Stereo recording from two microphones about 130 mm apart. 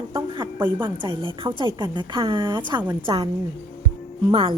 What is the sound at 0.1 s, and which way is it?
A woman's voice, 35° right (ahead or behind).